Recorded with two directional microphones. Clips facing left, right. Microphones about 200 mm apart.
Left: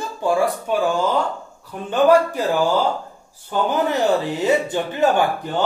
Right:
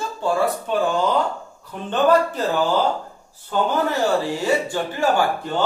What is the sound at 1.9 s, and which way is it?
Speech, 10° left (ahead or behind).